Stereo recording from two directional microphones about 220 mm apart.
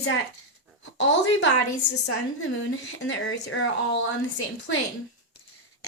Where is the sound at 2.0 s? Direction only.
75° left (ahead or behind).